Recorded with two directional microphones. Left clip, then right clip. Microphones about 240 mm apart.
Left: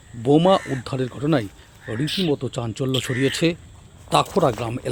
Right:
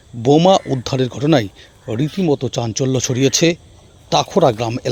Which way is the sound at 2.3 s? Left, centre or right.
Right.